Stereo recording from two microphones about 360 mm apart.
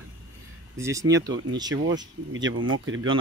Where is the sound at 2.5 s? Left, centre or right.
Right.